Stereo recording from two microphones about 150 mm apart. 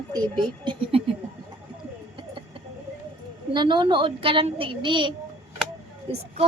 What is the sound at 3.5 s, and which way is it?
Child singing, 30° right (ahead or behind).